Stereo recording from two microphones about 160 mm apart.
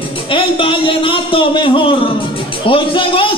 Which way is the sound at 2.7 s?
35° left (ahead or behind).